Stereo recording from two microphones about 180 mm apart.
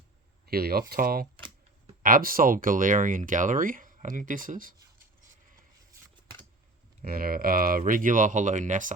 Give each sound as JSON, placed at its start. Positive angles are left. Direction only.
{"t": 0.4, "sound": "speech", "side_deg": -55}
{"t": 7.0, "sound": "speech", "side_deg": -55}